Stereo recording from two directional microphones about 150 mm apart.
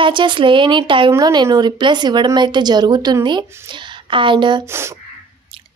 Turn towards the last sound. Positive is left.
turn(degrees=-15)  # may be behind; listen again after turning